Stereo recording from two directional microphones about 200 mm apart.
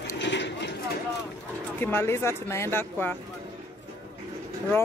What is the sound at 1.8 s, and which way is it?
Speech, 10° left (ahead or behind).